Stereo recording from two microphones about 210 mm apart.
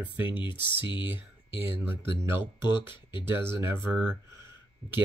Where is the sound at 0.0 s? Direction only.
10° right (ahead or behind).